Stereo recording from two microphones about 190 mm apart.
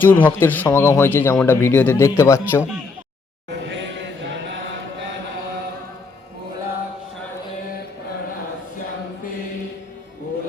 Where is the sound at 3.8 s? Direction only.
70° right (ahead or behind).